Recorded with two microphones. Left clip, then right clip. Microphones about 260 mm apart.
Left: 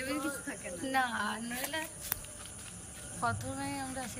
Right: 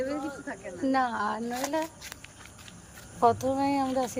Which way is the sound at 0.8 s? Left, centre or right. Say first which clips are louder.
Right 5 dB; right.